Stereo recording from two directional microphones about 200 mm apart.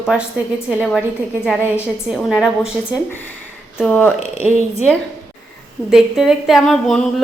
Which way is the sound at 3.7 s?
5° left (ahead or behind).